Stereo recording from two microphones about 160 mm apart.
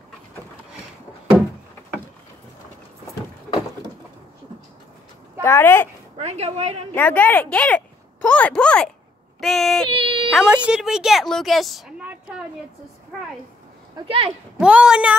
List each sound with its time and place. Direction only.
5.4 s speech: 15° left (ahead or behind)
6.1 s a woman's voice: 40° right (ahead or behind)
6.9 s speech: 10° left (ahead or behind)
9.4 s child singing: centre (ahead or behind)
9.8 s a sound: 35° right (ahead or behind)
10.3 s a woman's voice: 5° right (ahead or behind)
13.9 s a woman's voice: 35° right (ahead or behind)
14.6 s speech: 5° right (ahead or behind)